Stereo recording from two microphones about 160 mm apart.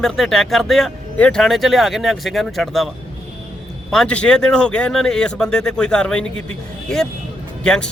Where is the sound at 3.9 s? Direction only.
5° left (ahead or behind).